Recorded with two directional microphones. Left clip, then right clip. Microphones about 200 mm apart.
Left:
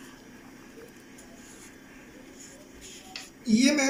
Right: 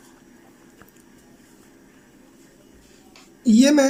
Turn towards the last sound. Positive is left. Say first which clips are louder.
# right 8 dB
turn(degrees=-55)  # may be behind; listen again after turning